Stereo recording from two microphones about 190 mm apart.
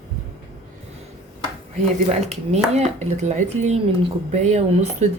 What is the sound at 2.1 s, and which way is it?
Speech, 35° right (ahead or behind).